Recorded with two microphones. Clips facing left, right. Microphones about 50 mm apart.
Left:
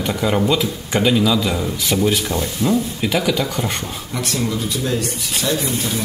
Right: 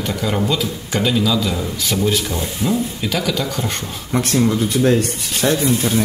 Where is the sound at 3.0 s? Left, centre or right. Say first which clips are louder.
Left 2 dB; centre.